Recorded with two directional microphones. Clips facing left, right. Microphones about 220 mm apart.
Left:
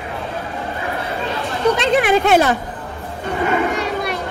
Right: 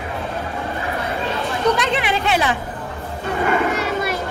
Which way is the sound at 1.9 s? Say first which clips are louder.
Left 7 dB; 50° left (ahead or behind).